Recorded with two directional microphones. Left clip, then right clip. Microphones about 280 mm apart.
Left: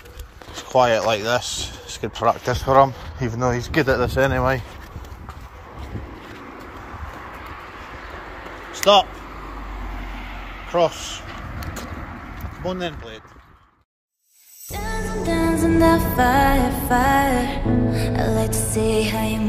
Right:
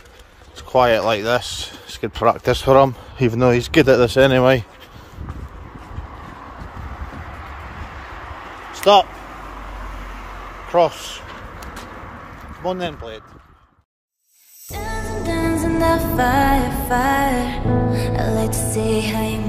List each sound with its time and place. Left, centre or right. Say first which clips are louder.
0.7 s speech: right 2 dB; centre
2.4 s speech: right 2 dB; right
8.4 s a sound: left 3 dB; centre
10.1 s vehicle: right 1 dB; centre
12.6 s speech: right 3 dB; centre
14.7 s music: right 1 dB; centre